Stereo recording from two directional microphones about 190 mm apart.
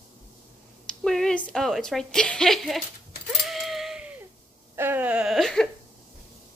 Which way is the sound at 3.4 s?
Centre (ahead or behind).